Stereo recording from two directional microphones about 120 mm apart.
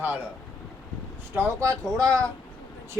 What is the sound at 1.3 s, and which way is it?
Speech, 20° right (ahead or behind).